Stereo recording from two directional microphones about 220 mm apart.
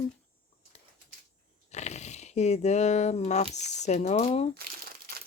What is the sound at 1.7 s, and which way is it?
Speech, 30° left (ahead or behind).